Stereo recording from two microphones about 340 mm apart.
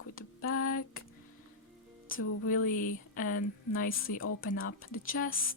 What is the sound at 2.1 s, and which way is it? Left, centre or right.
Music, left.